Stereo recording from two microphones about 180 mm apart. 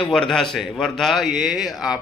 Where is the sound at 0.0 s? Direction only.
5° left (ahead or behind).